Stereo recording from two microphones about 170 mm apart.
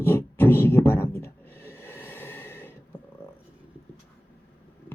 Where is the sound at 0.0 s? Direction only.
15° left (ahead or behind).